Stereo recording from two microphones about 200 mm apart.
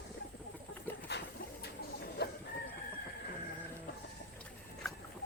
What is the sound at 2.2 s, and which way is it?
Chicken, 55° left (ahead or behind).